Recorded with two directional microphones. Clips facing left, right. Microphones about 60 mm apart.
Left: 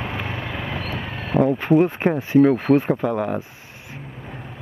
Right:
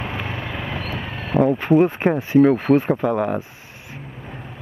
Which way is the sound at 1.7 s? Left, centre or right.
Right.